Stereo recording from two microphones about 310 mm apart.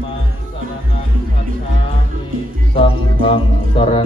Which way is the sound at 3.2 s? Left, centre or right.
Centre.